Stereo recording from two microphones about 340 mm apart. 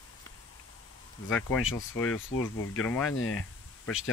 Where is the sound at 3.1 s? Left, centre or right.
Left.